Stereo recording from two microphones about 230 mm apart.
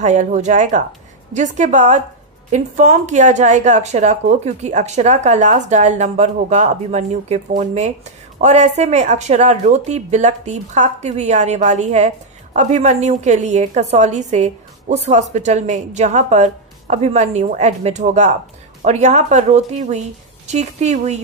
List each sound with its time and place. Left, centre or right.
0.0 s a woman's voice: right